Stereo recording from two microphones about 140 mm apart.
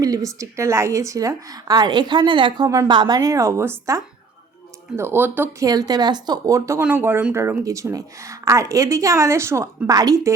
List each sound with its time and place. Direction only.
0.0 s speech: 25° right (ahead or behind)
5.6 s speech: 25° right (ahead or behind)